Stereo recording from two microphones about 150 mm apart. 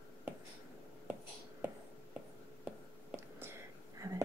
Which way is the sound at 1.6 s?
10° right (ahead or behind).